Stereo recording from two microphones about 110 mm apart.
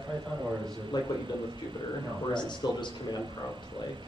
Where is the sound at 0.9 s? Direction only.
40° left (ahead or behind).